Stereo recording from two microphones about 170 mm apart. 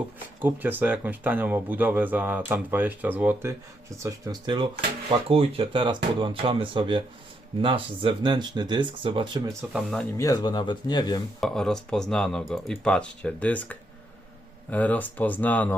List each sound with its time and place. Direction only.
0.4 s speech: 10° right (ahead or behind); by 9.6 s 30° right (ahead or behind)
9.7 s speech: 5° left (ahead or behind)
10.2 s speech: 20° left (ahead or behind)
11.3 s speech: centre (ahead or behind)